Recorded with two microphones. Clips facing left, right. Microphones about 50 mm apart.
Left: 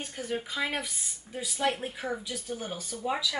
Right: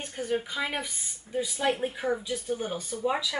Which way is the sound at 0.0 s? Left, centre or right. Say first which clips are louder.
Right 4 dB; centre.